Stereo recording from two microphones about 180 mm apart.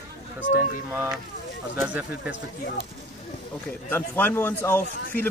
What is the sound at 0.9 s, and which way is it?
Speech, 10° right (ahead or behind).